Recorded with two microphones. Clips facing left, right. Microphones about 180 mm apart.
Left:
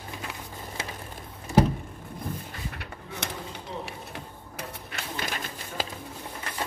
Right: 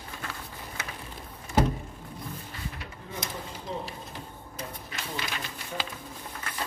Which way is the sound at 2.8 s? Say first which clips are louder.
Left 1 dB; 70° left (ahead or behind).